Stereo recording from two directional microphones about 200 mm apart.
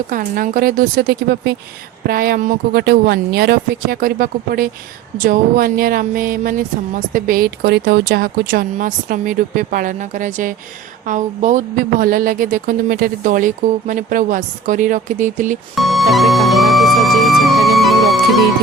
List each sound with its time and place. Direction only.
0.1 s speech: 45° right (ahead or behind)
15.7 s music: centre (ahead or behind)